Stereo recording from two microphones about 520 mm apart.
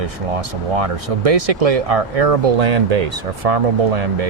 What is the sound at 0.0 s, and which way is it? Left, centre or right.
Speech, right.